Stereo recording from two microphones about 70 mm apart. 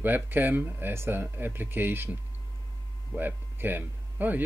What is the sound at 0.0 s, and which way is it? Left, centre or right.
Speech, right.